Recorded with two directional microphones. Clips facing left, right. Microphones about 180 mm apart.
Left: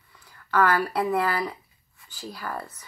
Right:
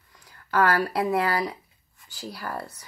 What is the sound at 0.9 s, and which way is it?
Speech, 10° right (ahead or behind).